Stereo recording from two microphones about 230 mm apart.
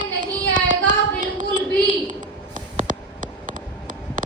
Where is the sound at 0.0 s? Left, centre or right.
Right.